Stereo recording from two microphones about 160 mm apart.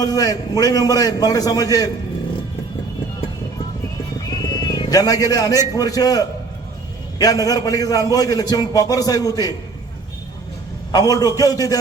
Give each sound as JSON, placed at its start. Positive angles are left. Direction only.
{"t": 0.0, "sound": "a man's voice", "side_deg": 25}
{"t": 4.3, "sound": "a man's voice", "side_deg": 25}
{"t": 10.9, "sound": "a man's voice", "side_deg": 25}